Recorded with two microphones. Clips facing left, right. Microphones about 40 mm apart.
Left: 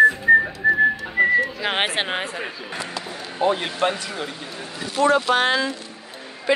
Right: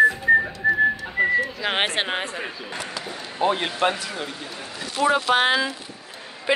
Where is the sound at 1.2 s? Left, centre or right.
Centre.